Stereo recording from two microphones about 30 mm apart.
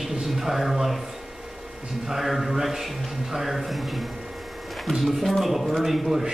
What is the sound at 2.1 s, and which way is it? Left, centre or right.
A man's voice, centre.